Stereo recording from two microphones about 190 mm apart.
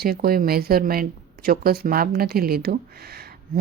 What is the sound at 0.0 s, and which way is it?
Speech, 55° right (ahead or behind).